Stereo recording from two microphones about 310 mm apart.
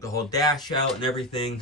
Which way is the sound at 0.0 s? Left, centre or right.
Centre.